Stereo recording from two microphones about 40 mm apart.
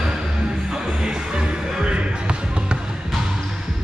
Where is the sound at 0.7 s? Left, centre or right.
Centre.